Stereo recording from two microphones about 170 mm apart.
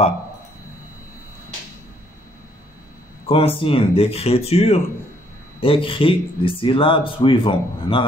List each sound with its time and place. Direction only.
3.3 s speech: 35° left (ahead or behind)